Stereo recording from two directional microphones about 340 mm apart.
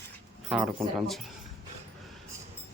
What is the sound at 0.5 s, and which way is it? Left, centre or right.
Speech, centre.